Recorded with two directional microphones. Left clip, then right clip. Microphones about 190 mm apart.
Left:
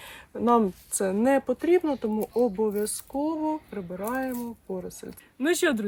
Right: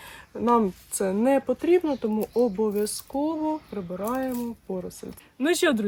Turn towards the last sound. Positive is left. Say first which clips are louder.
# right 2 dB
turn(degrees=0)  # may be behind; listen again after turning